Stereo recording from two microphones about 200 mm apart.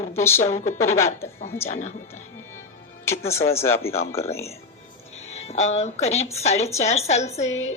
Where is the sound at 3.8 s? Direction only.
90° left.